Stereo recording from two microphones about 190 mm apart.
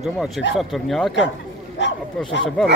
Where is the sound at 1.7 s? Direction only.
70° left (ahead or behind).